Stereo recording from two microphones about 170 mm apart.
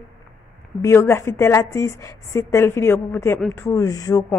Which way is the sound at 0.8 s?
15° left (ahead or behind).